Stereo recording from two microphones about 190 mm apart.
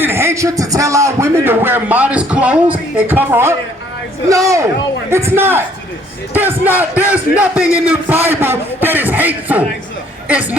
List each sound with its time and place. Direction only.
0.0 s a man's voice: 15° right (ahead or behind)